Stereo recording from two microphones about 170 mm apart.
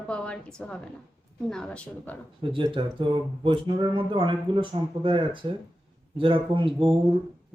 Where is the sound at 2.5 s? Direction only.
30° right (ahead or behind).